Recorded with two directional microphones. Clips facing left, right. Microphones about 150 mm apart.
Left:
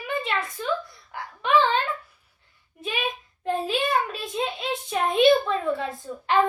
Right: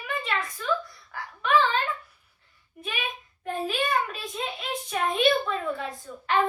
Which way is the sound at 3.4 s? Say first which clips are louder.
Left 3 dB; 25° left (ahead or behind).